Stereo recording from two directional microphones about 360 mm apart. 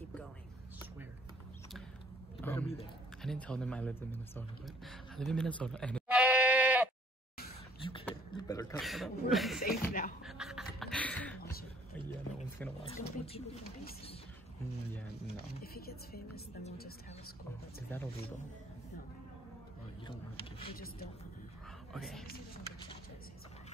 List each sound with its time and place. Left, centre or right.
2.3 s a sound: centre
3.2 s speech: centre
5.5 s bleat: centre
7.8 s chuckle: centre
9.6 s speech: left
10.2 s a sound: centre
12.8 s speech: centre
15.3 s speech: left
20.1 s speech: centre
21.9 s speech: centre